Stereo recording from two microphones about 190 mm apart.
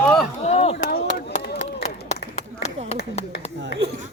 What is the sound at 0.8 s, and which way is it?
Chop, 55° left (ahead or behind).